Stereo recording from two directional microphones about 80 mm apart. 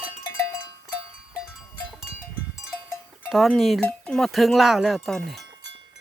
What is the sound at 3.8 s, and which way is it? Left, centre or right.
Speech, centre.